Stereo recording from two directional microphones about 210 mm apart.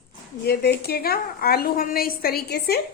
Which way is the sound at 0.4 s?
50° left (ahead or behind).